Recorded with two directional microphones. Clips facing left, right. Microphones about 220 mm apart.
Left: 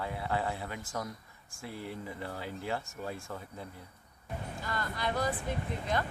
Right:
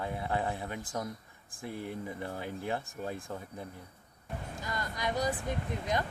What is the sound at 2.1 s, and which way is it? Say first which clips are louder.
Speech: right 2 dB; 20° right (ahead or behind).